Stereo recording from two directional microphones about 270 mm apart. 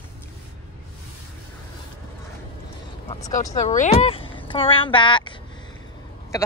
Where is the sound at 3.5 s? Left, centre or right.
Left.